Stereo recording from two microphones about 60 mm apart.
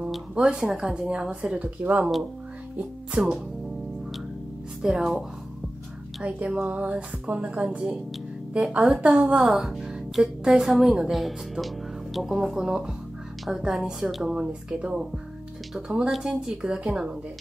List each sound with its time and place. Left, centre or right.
0.3 s speech: centre
3.1 s speech: centre
4.8 s speech: centre
6.2 s speech: right
9.5 s speech: centre
12.4 s speech: centre
16.1 s speech: centre